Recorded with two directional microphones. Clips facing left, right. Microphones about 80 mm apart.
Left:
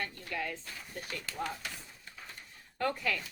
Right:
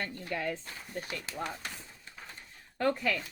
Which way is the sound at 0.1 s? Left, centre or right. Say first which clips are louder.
Right 3 dB; right.